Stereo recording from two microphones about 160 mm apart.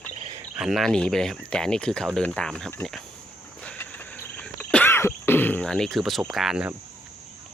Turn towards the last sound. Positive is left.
turn(degrees=-5)  # may be behind; listen again after turning